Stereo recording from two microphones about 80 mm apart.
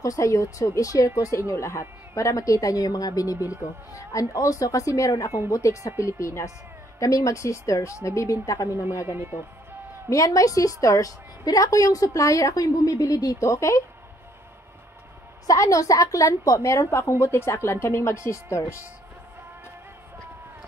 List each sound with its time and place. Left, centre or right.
0.0 s a woman's voice: left
9.0 s speech: right
10.0 s a woman's voice: left
15.4 s a woman's voice: left